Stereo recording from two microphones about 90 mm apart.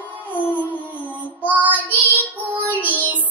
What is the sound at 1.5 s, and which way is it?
Child singing, 20° right (ahead or behind).